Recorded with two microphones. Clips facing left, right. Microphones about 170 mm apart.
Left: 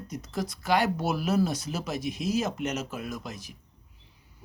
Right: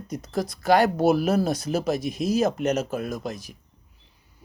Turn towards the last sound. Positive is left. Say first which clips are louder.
# right 6 dB
turn(degrees=-40)  # may be behind; listen again after turning